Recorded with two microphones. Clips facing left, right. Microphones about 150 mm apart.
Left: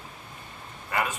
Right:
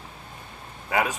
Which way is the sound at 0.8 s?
60° right (ahead or behind).